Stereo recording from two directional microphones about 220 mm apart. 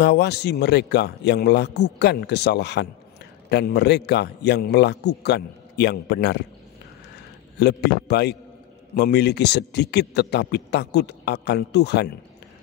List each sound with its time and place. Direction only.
0.0 s a man's voice: 50° left (ahead or behind)
7.5 s a man's voice: 50° left (ahead or behind)